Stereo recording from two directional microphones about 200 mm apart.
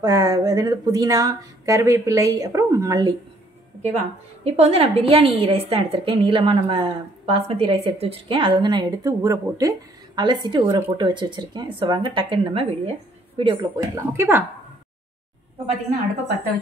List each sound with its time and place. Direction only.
0.0 s speech: 20° right (ahead or behind)
4.5 s a woman's voice: 30° right (ahead or behind); by 14.4 s 10° right (ahead or behind)